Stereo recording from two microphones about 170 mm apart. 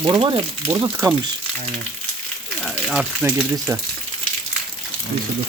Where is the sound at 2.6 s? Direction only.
5° right (ahead or behind).